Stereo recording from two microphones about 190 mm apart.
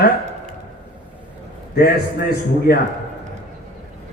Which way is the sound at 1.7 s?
55° left (ahead or behind).